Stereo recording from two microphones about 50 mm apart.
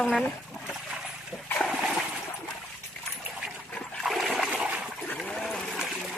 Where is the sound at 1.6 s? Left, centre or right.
Centre.